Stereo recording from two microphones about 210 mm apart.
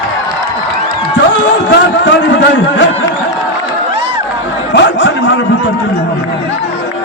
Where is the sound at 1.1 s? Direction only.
60° left (ahead or behind).